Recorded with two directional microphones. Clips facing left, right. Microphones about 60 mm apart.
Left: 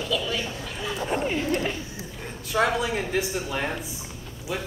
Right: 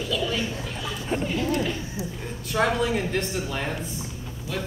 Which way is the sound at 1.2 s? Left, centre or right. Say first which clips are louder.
Right 1 dB; left.